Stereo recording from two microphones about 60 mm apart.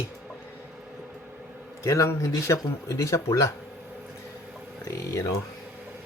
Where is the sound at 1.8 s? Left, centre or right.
Left.